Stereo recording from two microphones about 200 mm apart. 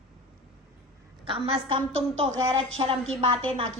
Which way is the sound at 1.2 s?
25° right (ahead or behind).